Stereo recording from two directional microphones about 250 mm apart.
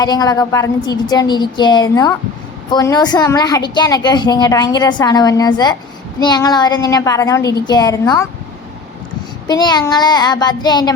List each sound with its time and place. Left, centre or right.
0.0 s a woman's voice: centre
9.5 s a woman's voice: centre